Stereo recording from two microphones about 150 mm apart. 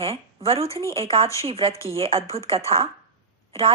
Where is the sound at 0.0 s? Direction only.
40° right (ahead or behind).